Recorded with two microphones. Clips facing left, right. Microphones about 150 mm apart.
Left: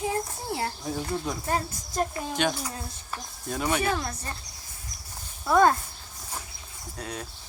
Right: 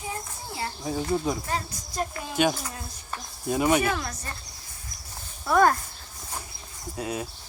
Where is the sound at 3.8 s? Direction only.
25° left (ahead or behind).